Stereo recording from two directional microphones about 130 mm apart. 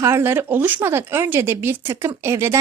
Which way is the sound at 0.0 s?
20° right (ahead or behind).